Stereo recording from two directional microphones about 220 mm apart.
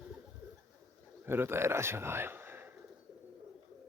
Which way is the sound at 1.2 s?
10° right (ahead or behind).